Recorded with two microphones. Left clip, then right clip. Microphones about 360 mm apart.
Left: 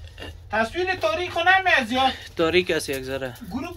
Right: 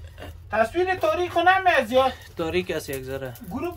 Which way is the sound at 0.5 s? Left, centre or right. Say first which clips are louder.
Right 1 dB; right.